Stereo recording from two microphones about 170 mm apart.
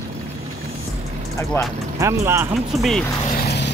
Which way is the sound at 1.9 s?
15° right (ahead or behind).